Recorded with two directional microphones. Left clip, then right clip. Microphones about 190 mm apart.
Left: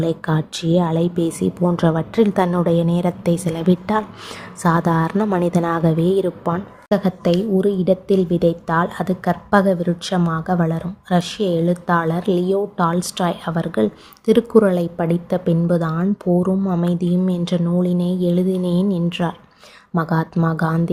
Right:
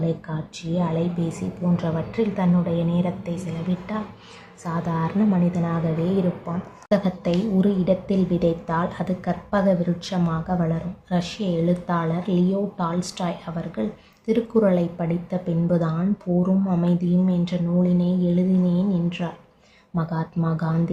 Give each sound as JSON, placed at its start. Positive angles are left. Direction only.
{"t": 0.0, "sound": "a woman's voice", "side_deg": 50}
{"t": 6.9, "sound": "a woman's voice", "side_deg": 40}